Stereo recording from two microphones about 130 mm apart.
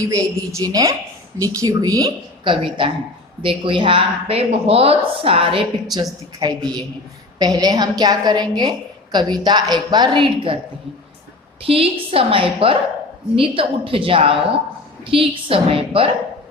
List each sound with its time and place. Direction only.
0.0 s a woman's voice: 25° right (ahead or behind)
2.4 s a woman's voice: 40° right (ahead or behind)
6.4 s a woman's voice: 30° right (ahead or behind)
11.6 s a woman's voice: 45° right (ahead or behind)